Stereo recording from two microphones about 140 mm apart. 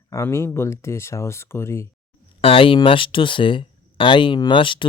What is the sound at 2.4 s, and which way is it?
Speech, 40° left (ahead or behind).